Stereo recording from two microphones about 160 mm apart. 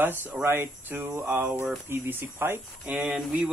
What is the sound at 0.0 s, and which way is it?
Speech, 10° right (ahead or behind).